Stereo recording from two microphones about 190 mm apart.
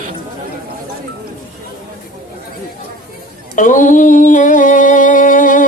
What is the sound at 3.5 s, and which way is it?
Music, 45° left (ahead or behind).